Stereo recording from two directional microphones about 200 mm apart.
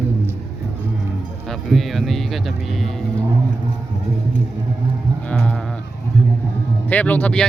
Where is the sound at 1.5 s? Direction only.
Centre (ahead or behind).